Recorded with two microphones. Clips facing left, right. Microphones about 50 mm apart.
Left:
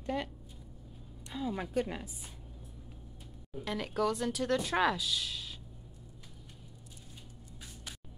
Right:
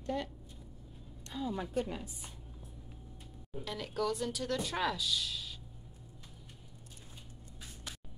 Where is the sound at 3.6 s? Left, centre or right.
Left.